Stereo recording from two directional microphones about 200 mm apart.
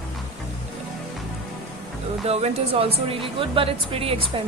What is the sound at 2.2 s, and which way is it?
Speech, 30° right (ahead or behind).